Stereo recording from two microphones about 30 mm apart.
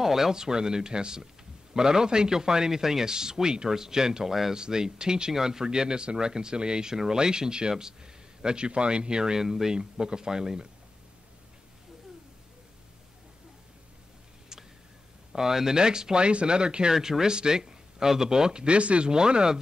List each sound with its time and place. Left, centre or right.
0.0 s a man's voice: centre
15.3 s a man's voice: centre
16.9 s a man's voice: centre
18.8 s speech: right
19.0 s a man's voice: right